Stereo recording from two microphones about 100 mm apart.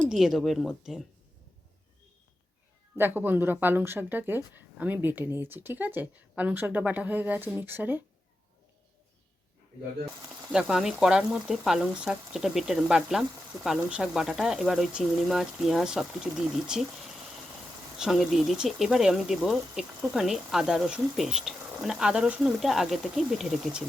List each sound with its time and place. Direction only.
0.1 s speech: 5° right (ahead or behind)
3.0 s speech: 20° right (ahead or behind)
10.5 s speech: 5° right (ahead or behind)